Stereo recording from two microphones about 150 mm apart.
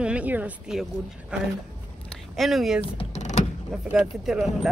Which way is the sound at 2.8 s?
45° left (ahead or behind).